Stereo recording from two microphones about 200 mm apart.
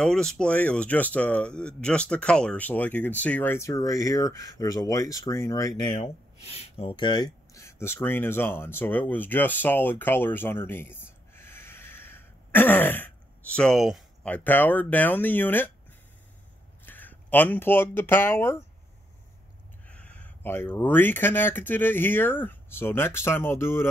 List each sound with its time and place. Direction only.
0.0 s speech: 5° left (ahead or behind)
16.8 s speech: 10° left (ahead or behind)
19.9 s speech: 5° left (ahead or behind)